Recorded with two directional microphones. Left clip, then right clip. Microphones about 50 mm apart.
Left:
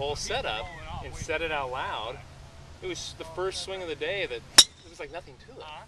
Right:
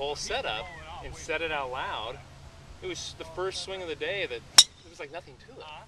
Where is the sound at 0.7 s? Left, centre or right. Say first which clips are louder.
Left 2 dB; left.